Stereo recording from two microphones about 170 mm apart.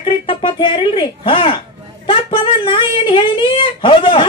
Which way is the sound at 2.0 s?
30° left (ahead or behind).